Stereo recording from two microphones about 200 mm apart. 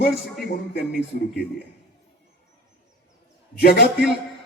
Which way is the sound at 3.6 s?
50° left (ahead or behind).